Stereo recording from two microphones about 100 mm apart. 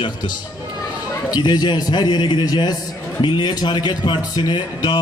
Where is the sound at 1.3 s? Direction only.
45° left (ahead or behind).